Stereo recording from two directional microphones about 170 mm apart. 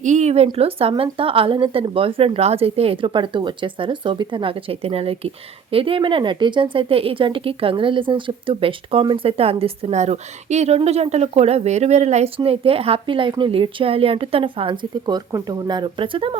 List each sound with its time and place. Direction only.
0.0 s speech: 45° right (ahead or behind)